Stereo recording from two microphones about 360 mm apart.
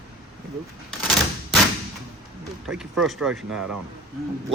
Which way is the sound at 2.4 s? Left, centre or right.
Centre.